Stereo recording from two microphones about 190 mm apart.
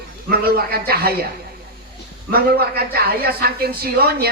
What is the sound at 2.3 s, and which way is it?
Speech, 55° right (ahead or behind).